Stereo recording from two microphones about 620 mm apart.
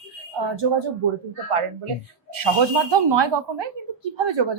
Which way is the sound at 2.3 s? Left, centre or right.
Right.